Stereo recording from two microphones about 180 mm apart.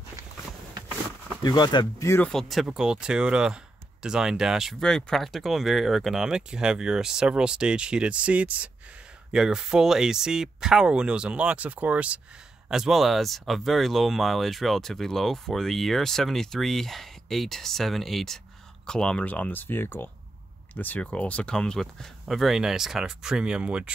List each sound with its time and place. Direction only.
1.4 s speech: 25° left (ahead or behind)
2.2 s speech: centre (ahead or behind)